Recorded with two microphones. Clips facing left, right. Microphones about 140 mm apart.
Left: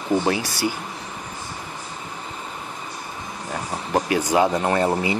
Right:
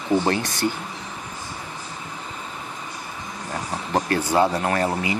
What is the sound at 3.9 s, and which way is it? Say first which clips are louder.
Speech: left 1 dB; 15° left (ahead or behind).